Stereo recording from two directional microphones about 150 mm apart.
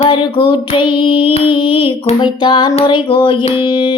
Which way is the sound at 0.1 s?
30° left (ahead or behind).